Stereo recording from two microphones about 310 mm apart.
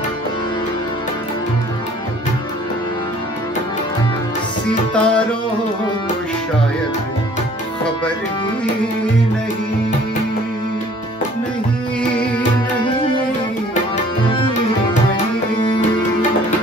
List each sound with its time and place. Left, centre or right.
4.9 s music: centre
14.2 s tabla: centre